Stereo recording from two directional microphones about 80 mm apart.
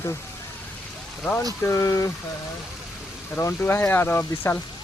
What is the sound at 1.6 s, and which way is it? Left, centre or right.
Speech, left.